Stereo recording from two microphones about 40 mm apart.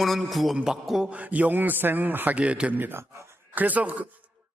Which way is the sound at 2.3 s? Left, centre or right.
Right.